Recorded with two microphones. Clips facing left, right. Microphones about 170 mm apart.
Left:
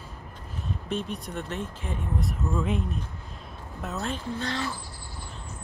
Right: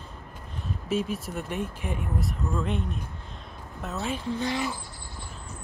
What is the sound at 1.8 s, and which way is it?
Speech, 15° right (ahead or behind).